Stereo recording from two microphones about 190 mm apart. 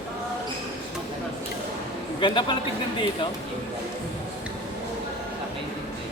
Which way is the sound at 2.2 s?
25° left (ahead or behind).